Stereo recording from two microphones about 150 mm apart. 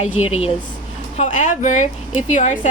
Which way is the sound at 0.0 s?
45° left (ahead or behind).